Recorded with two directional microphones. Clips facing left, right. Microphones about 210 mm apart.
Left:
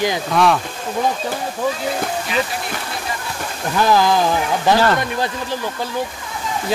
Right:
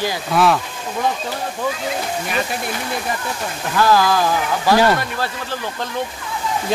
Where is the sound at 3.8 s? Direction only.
20° left (ahead or behind).